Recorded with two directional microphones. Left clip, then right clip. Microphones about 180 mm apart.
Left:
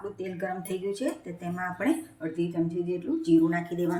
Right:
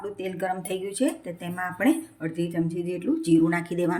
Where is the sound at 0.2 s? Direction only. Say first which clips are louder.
Right 5 dB; 60° right (ahead or behind).